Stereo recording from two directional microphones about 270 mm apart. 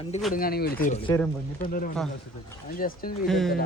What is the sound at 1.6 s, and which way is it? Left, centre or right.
Speech, left.